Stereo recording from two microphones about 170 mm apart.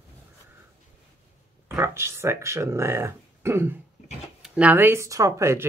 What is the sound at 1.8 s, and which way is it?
Speech, 15° right (ahead or behind).